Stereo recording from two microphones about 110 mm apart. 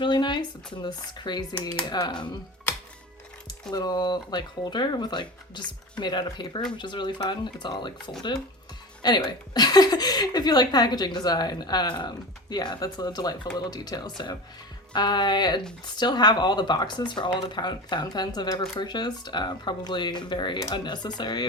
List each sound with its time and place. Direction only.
0.0 s a woman's voice: 45° left (ahead or behind)
3.7 s a woman's voice: 40° left (ahead or behind)